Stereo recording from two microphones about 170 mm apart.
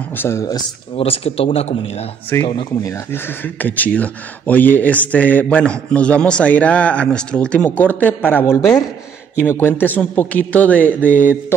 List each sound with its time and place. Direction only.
0.2 s speech: 15° left (ahead or behind)
0.9 s a man's voice: 35° left (ahead or behind)
2.3 s speech: 15° left (ahead or behind)
11.1 s a sound: 50° left (ahead or behind)